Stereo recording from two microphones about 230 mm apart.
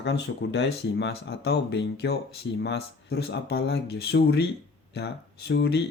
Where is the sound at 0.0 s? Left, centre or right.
Left.